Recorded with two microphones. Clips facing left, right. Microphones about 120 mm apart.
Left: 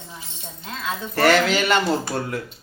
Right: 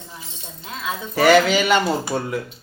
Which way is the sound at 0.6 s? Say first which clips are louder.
Right 1 dB; 15° right (ahead or behind).